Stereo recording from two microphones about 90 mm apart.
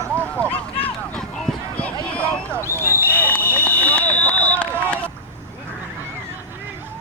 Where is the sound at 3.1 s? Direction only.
25° left (ahead or behind).